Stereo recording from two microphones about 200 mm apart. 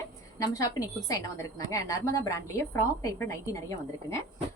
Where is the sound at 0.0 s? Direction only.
15° left (ahead or behind).